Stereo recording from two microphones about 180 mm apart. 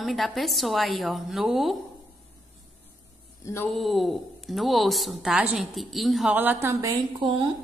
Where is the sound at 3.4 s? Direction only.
15° left (ahead or behind).